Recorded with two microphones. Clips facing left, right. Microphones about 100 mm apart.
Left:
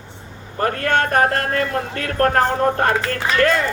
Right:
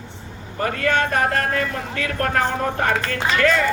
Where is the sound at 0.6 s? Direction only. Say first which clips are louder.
Left 2 dB; 50° left (ahead or behind).